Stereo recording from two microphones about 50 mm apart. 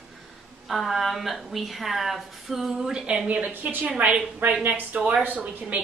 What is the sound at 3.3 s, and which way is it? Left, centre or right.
A woman's voice, right.